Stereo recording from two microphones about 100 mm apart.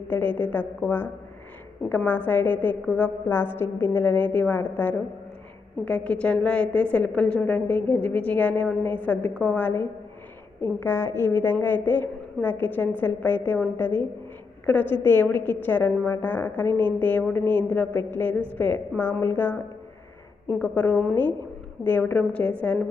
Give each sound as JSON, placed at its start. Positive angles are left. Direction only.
{"t": 0.1, "sound": "a woman's voice", "side_deg": 15}